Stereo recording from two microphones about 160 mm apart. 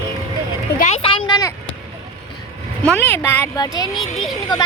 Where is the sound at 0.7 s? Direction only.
45° left (ahead or behind).